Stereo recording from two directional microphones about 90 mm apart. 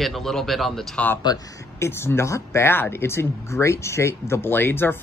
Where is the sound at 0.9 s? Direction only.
20° left (ahead or behind).